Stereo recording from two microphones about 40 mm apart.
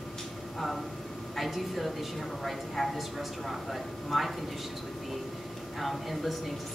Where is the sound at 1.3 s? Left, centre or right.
Centre.